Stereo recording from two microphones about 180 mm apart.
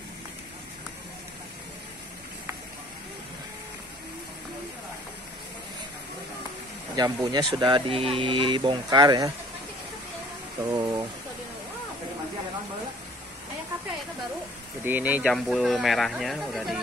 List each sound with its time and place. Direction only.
7.0 s speech: 20° right (ahead or behind)
10.6 s a sound: 20° right (ahead or behind)
14.9 s speech: 10° right (ahead or behind)